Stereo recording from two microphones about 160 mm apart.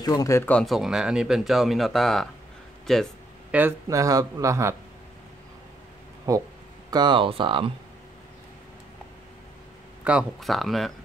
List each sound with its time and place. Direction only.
0.0 s speech: 20° left (ahead or behind)
0.5 s speech: 5° left (ahead or behind)
3.5 s speech: 15° right (ahead or behind)
6.3 s speech: 20° right (ahead or behind)
10.0 s speech: 5° right (ahead or behind)